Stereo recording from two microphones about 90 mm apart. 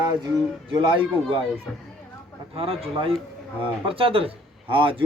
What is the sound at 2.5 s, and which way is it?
A man's voice, 90° right.